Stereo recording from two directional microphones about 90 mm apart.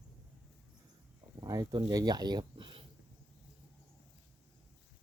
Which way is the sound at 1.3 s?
45° right (ahead or behind).